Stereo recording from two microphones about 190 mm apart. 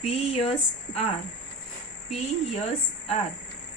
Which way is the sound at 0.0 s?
30° left (ahead or behind).